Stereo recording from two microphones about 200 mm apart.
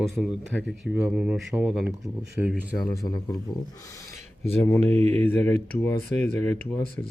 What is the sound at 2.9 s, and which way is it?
Speech, 20° left (ahead or behind).